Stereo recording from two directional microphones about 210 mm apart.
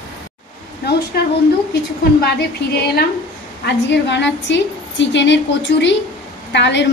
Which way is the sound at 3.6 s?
55° left (ahead or behind).